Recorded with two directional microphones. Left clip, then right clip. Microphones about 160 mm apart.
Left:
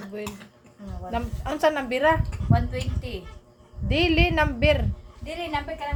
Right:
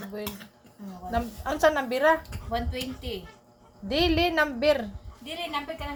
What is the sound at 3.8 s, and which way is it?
Speech, 10° right (ahead or behind).